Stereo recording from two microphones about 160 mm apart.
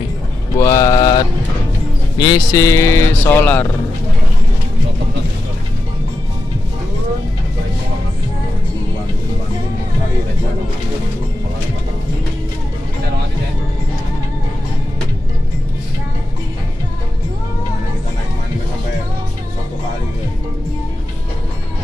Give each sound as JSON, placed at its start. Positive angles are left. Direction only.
{"t": 0.6, "sound": "mantra", "side_deg": 20}
{"t": 2.1, "sound": "speech", "side_deg": 25}